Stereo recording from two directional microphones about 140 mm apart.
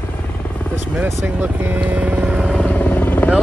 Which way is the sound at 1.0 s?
15° right (ahead or behind).